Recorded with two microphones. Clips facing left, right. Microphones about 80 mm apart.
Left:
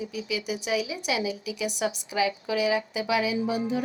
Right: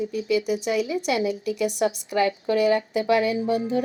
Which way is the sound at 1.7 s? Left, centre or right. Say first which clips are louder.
Right 5 dB; left.